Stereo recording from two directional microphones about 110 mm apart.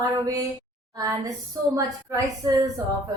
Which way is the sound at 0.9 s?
30° right (ahead or behind).